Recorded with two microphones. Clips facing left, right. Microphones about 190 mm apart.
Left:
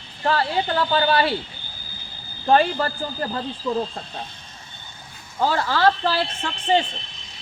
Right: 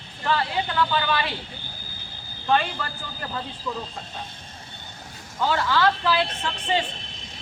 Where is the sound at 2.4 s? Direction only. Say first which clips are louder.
Left 6 dB; 40° left (ahead or behind).